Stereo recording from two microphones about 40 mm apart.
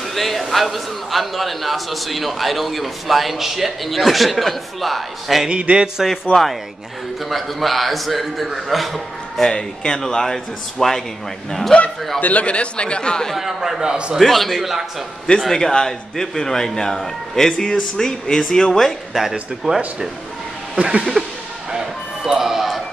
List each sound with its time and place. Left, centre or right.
0.1 s a man's voice: centre
5.5 s a sound: right
6.3 s speech: left
7.2 s a man's voice: centre
9.4 s a man's voice: centre
12.2 s speech: left; by 13.3 s centre
13.3 s a man's voice: centre
13.7 s a sound: right
14.2 s a man's voice: centre
15.5 s a man's voice: centre
19.7 s a sound: centre
20.7 s speech: right
21.7 s music: centre